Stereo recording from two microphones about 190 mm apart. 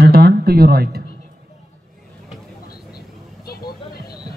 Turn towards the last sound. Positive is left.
turn(degrees=55)  # may be behind; listen again after turning